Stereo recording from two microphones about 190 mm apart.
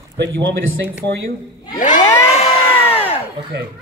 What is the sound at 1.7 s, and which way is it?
Cat, 40° left (ahead or behind).